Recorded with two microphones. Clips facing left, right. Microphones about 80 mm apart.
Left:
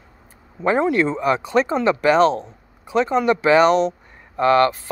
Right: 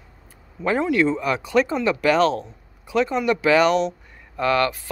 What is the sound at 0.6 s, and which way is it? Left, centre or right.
Speech, left.